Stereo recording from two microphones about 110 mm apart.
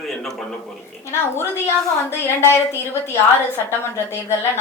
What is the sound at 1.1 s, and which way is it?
A woman's voice, 20° left (ahead or behind).